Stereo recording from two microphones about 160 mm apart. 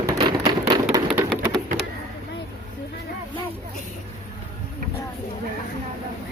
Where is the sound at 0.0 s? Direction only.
20° right (ahead or behind).